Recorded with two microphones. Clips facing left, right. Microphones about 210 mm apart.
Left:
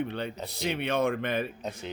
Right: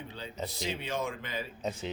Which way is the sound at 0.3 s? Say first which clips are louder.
Right 1 dB; centre (ahead or behind).